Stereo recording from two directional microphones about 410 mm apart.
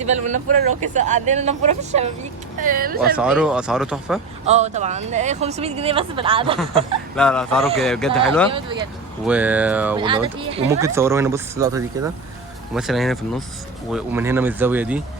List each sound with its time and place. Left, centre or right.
0.0 s speech: centre
3.2 s speech: centre
4.4 s speech: centre
7.2 s speech: centre
8.4 s speech: centre